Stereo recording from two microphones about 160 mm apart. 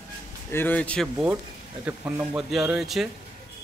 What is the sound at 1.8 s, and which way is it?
A man's voice, 10° right (ahead or behind).